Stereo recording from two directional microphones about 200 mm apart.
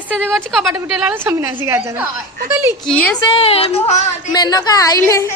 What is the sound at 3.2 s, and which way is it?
Speech, 25° left (ahead or behind).